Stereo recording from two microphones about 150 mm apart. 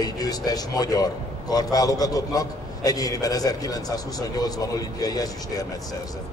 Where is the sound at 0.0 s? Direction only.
25° left (ahead or behind).